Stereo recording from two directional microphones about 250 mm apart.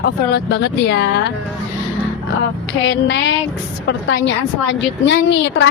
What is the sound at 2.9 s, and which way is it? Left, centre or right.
A woman's voice, left.